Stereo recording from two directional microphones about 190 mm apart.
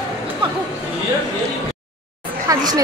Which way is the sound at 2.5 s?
20° right (ahead or behind).